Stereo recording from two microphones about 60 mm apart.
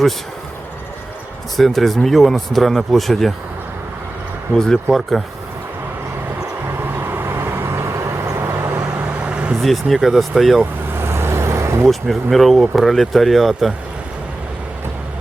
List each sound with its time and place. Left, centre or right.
1.5 s speech: centre
4.5 s speech: centre
6.8 s vehicle: right
9.2 s vehicle: centre
9.6 s speech: centre
10.6 s vehicle: right
11.9 s speech: centre